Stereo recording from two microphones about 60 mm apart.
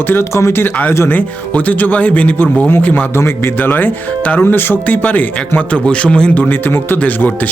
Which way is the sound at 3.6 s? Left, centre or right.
Left.